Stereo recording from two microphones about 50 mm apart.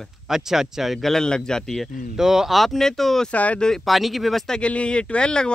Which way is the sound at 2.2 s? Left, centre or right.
Centre.